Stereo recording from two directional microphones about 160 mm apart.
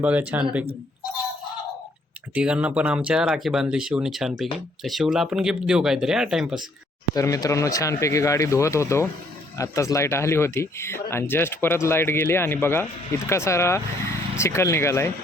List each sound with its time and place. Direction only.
0.0 s speech: 10° right (ahead or behind)
2.3 s speech: 5° right (ahead or behind)
7.1 s speech: 20° left (ahead or behind)